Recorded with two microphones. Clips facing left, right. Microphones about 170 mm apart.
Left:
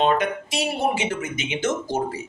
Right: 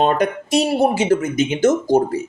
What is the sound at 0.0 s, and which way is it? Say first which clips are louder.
A man's voice: right 3 dB; 40° right (ahead or behind).